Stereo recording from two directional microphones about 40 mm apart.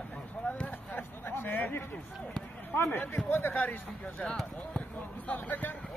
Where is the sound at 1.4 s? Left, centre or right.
Left.